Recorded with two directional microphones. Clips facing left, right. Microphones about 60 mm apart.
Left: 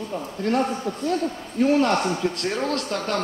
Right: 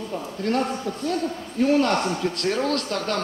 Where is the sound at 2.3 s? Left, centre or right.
Centre.